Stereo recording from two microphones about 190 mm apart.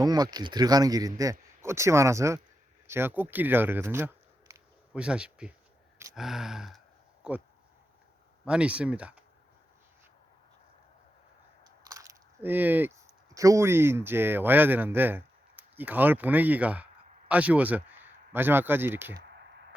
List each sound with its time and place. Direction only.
0.0 s a man's voice: 20° right (ahead or behind); by 7.4 s 5° right (ahead or behind)
8.4 s speech: 5° right (ahead or behind)
11.6 s biting: 20° right (ahead or behind)
13.3 s speech: 15° right (ahead or behind)
19.1 s a sound: 60° right (ahead or behind)